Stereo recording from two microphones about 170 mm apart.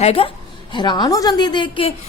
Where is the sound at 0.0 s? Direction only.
35° left (ahead or behind).